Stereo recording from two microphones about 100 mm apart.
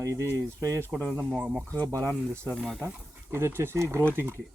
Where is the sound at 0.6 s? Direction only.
30° right (ahead or behind).